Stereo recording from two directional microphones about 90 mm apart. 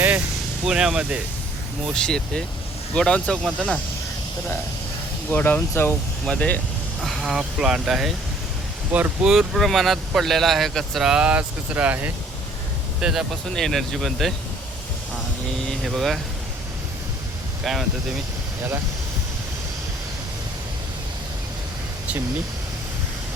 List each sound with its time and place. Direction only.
0.6 s speech: 10° right (ahead or behind)
1.9 s speech: 10° left (ahead or behind)
5.3 s speech: 20° left (ahead or behind)
6.2 s speech: 10° left (ahead or behind)
7.0 s speech: centre (ahead or behind)
8.9 s speech: 20° right (ahead or behind)
9.2 s speech: 5° right (ahead or behind)
13.6 s speech: 5° left (ahead or behind)
15.6 s speech: centre (ahead or behind)
17.6 s speech: centre (ahead or behind)